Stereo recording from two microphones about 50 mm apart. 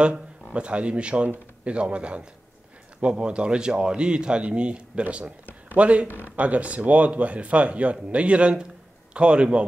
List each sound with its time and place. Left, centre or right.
0.0 s speech: centre